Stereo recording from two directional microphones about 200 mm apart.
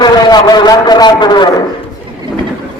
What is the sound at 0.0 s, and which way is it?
A woman's voice, 20° left (ahead or behind).